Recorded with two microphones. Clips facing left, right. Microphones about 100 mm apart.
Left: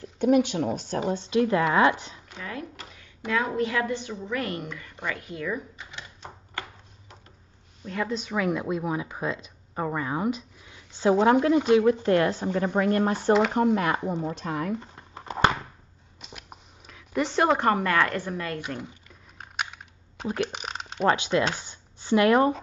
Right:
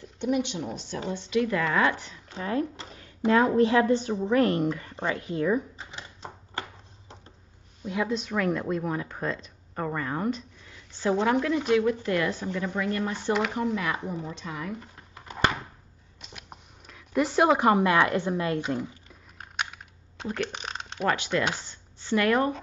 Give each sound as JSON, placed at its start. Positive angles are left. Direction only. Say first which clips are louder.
{"t": 0.2, "sound": "speech", "louder": "left 6 dB", "side_deg": 50}
{"t": 1.1, "sound": "speech", "louder": "left 2 dB", "side_deg": 30}
{"t": 2.2, "sound": "a woman's voice", "louder": "right 9 dB", "side_deg": -30}
{"t": 7.8, "sound": "speech", "louder": "right 1 dB", "side_deg": -5}
{"t": 12.5, "sound": "speech", "louder": "left 8 dB", "side_deg": 40}
{"t": 14.8, "sound": "a sound", "louder": "left 3 dB", "side_deg": 30}
{"t": 16.2, "sound": "speech", "louder": "left 1 dB", "side_deg": 0}
{"t": 19.3, "sound": "typing", "louder": "even", "side_deg": 0}
{"t": 20.2, "sound": "a sound", "louder": "left 2 dB", "side_deg": 5}
{"t": 21.1, "sound": "speech", "louder": "left 3 dB", "side_deg": 20}